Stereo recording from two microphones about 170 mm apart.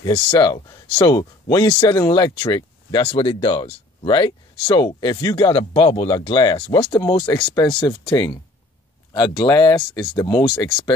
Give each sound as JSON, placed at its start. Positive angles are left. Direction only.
{"t": 0.0, "sound": "speech", "side_deg": 25}